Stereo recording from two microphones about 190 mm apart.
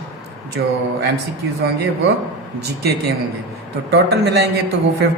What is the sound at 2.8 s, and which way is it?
Speech, 60° right (ahead or behind).